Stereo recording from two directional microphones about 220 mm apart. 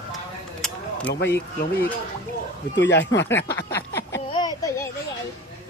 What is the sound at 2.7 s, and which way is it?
Speech, 55° left (ahead or behind).